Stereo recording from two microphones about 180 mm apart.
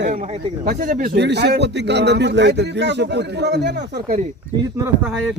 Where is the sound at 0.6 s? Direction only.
50° right (ahead or behind).